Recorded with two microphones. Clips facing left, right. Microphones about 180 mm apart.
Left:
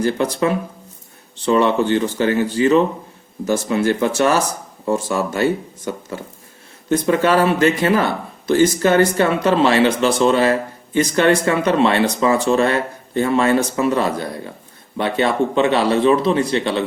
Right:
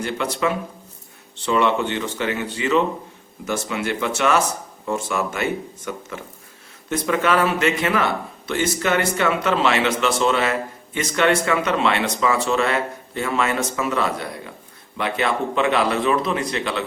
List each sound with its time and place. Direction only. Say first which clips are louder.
0.0 s speech: left 5 dB; 35° left (ahead or behind)